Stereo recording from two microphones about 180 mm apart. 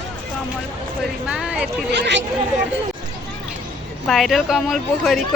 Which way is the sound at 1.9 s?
75° right (ahead or behind).